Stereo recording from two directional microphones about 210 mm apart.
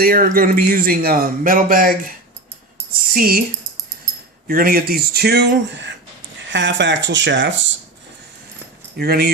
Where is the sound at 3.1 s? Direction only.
45° right (ahead or behind).